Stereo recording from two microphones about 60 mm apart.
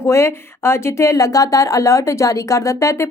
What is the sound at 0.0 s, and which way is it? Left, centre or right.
Speech, left.